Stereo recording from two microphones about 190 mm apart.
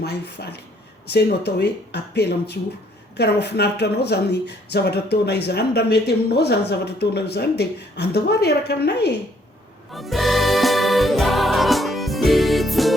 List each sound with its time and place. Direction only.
0.0 s speech: 60° left (ahead or behind)
9.9 s music: centre (ahead or behind)